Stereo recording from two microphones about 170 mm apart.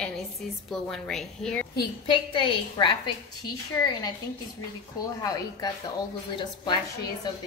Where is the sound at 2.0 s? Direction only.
30° left (ahead or behind).